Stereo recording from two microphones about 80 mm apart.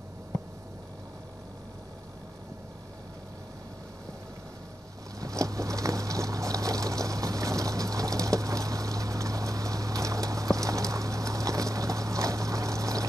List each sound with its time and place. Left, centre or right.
5.2 s boat: right